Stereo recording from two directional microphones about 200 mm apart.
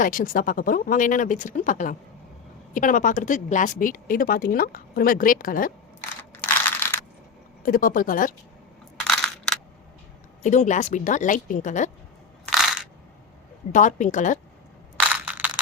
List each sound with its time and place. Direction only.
0.0 s a woman's voice: 45° left (ahead or behind)
6.0 s crushing: 10° left (ahead or behind)
7.6 s a woman's voice: 45° left (ahead or behind)
9.0 s coin: 5° left (ahead or behind)
10.4 s speech: 35° left (ahead or behind)
12.5 s crushing: 5° right (ahead or behind)
13.7 s speech: 40° left (ahead or behind)
14.9 s crushing: 5° right (ahead or behind)